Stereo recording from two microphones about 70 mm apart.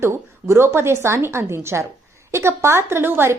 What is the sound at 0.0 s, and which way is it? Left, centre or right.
A woman's voice, right.